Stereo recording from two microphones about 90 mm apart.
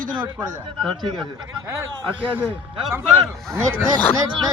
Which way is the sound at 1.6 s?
30° right (ahead or behind).